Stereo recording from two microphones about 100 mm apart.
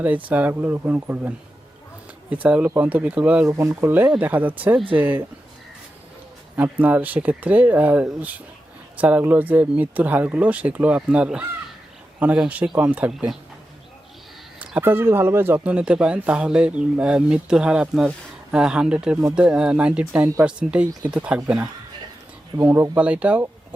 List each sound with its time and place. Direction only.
0.0 s speech: 15° right (ahead or behind)
2.3 s speech: 15° right (ahead or behind)
3.4 s speech: 30° right (ahead or behind)
6.6 s speech: 15° right (ahead or behind)
14.8 s speech: 20° right (ahead or behind)
22.6 s speech: 25° right (ahead or behind)
23.0 s speech: 10° right (ahead or behind)